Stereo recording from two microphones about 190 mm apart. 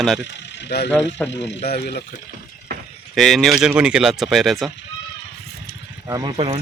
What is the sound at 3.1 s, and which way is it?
Speech, centre (ahead or behind).